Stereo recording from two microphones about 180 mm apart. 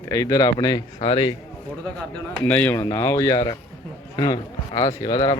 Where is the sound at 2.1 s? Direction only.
10° left (ahead or behind).